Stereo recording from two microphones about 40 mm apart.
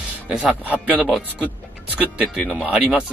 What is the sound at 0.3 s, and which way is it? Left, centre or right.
Speech, centre.